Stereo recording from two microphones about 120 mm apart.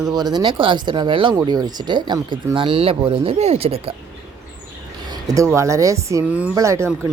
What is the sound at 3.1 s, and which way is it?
Speech, 55° right (ahead or behind).